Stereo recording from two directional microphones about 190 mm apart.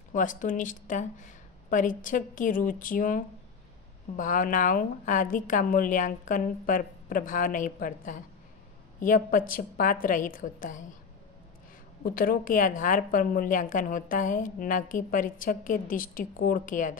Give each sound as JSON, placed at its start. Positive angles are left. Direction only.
{"t": 0.1, "sound": "a woman's voice", "side_deg": 45}
{"t": 12.0, "sound": "a woman's voice", "side_deg": 50}